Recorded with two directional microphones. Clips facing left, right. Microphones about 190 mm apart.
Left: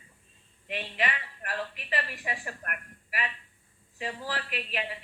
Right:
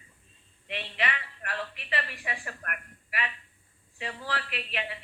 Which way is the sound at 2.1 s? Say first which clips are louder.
Left 1 dB; 40° left (ahead or behind).